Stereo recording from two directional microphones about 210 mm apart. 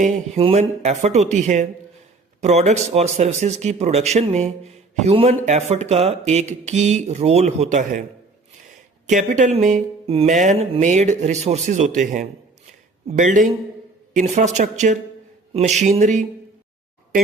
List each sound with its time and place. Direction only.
0.0 s speech: 30° right (ahead or behind)
9.0 s speech: 35° right (ahead or behind)